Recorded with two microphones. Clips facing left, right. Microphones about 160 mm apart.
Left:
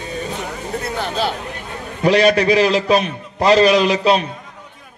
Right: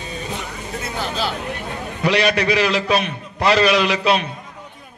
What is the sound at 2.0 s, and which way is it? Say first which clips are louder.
A man's voice: left 5 dB; 40° left (ahead or behind).